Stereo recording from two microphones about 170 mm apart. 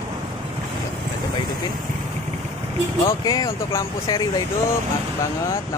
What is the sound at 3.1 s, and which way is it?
Speech, 20° left (ahead or behind).